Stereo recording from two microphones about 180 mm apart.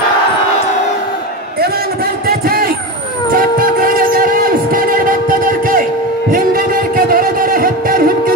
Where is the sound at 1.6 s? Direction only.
60° right (ahead or behind).